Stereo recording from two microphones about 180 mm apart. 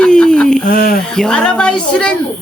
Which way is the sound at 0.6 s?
60° left (ahead or behind).